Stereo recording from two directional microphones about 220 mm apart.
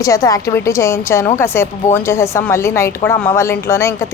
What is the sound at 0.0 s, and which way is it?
Speech, 15° left (ahead or behind).